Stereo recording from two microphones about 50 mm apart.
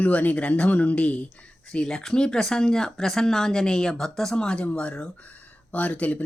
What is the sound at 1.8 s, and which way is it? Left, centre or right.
Speech, centre.